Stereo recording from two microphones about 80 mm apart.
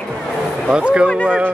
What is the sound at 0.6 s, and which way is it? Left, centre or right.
Speech, centre.